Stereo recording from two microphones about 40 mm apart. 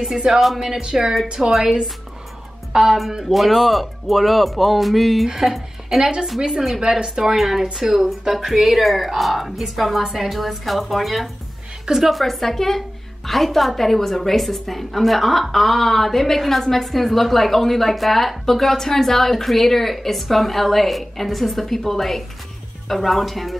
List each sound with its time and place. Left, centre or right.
0.3 s a woman's voice: centre
0.6 s a woman's voice: centre
6.8 s a woman's voice: centre